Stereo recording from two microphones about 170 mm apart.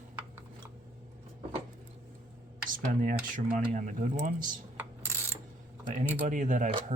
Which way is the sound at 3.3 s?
45° right (ahead or behind).